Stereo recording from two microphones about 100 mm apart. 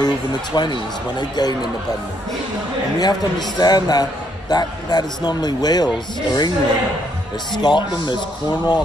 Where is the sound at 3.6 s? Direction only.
40° left (ahead or behind).